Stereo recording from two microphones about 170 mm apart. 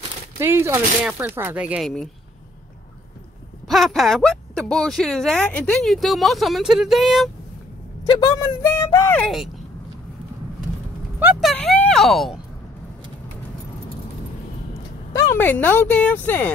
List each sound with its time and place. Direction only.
0.4 s speech: 15° right (ahead or behind)
3.6 s speech: centre (ahead or behind)
8.1 s speech: 25° left (ahead or behind)
9.2 s speech: centre (ahead or behind)
11.4 s speech: 5° left (ahead or behind)
15.1 s speech: 10° left (ahead or behind)